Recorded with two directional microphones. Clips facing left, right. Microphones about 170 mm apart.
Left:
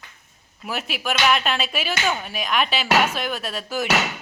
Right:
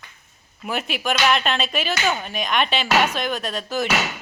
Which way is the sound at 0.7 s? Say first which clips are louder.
Right 2 dB; 5° left (ahead or behind).